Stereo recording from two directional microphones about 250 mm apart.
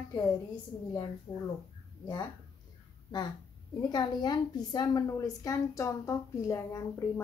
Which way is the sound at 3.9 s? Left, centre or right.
Centre.